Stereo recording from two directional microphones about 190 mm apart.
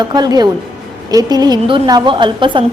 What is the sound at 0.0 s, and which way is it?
A woman's voice, 20° right (ahead or behind).